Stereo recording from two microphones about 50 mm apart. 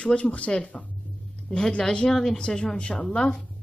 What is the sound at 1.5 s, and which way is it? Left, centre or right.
Speech, centre.